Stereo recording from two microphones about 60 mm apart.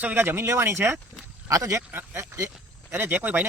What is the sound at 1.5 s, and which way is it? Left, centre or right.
Speech, right.